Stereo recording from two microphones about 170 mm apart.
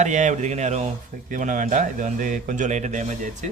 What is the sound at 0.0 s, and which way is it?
Speech, 45° right (ahead or behind).